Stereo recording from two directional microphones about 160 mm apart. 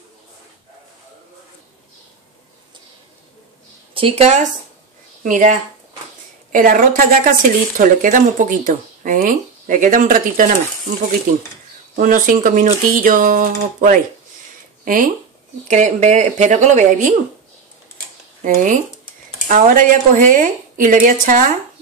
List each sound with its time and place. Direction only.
3.9 s speech: 35° right (ahead or behind)
5.2 s a woman's voice: 55° right (ahead or behind)
11.9 s a woman's voice: 60° right (ahead or behind)
18.4 s speech: 55° right (ahead or behind)